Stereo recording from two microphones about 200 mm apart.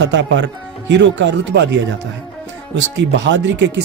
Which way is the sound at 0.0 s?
60° right (ahead or behind).